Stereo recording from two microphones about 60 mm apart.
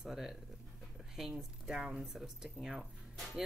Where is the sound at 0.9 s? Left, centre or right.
Centre.